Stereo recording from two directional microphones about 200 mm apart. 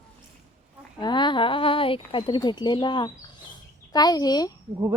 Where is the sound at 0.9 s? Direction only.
20° left (ahead or behind).